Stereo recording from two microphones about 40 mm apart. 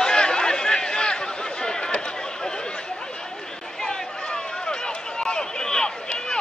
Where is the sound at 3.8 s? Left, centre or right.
Centre.